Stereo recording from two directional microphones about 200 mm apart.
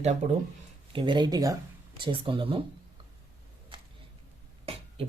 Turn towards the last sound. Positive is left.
turn(degrees=-30)  # may be behind; listen again after turning